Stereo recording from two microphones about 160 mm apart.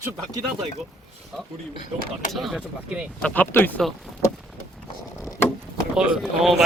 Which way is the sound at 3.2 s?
10° left (ahead or behind).